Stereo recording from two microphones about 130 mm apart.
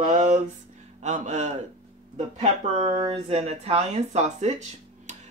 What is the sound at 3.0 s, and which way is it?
Speech, 50° right (ahead or behind).